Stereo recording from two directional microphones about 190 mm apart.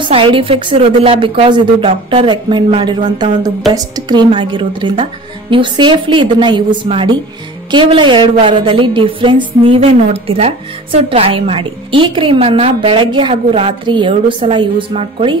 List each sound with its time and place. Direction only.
0.0 s a woman's voice: 25° right (ahead or behind)